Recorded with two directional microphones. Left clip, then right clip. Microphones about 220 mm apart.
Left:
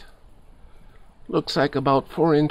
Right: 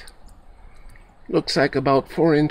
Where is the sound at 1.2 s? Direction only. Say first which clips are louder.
Right 2 dB; 20° left (ahead or behind).